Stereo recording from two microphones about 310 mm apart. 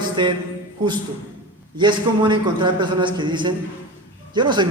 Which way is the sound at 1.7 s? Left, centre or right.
Centre.